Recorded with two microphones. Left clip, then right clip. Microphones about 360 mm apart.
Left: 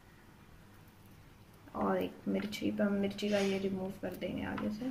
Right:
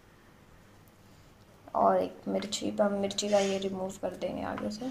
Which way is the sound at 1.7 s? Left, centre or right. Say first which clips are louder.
Right 9 dB; right.